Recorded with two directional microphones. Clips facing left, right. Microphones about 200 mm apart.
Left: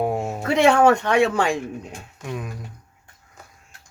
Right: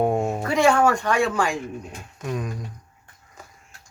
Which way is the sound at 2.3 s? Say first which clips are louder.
Right 2 dB; 5° left (ahead or behind).